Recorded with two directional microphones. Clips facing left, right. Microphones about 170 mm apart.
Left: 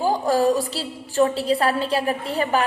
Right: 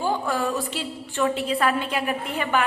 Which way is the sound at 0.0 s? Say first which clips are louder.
Left 6 dB; 40° left (ahead or behind).